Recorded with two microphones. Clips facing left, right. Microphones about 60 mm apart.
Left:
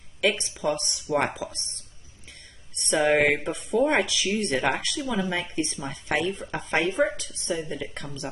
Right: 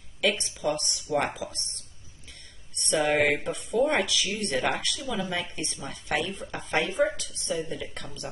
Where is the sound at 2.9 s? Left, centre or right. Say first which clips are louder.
Left 3 dB; left.